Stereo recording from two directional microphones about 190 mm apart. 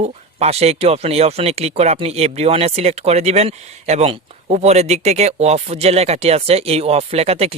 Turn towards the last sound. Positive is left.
turn(degrees=-30)  # may be behind; listen again after turning